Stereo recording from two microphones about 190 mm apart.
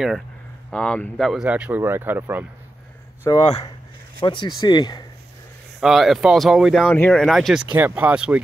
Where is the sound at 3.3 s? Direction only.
25° left (ahead or behind).